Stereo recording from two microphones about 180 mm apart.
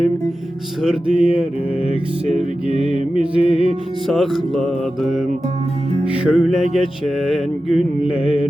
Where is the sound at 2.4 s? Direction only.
30° left (ahead or behind).